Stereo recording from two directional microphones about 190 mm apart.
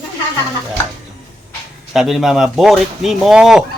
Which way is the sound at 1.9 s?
Centre (ahead or behind).